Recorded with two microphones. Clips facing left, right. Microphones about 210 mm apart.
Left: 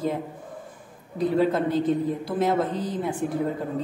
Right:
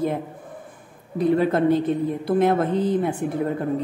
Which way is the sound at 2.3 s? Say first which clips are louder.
Right 6 dB; 60° right (ahead or behind).